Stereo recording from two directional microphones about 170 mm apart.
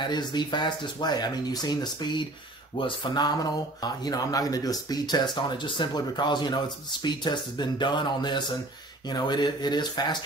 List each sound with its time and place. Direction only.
0.1 s speech: 25° left (ahead or behind)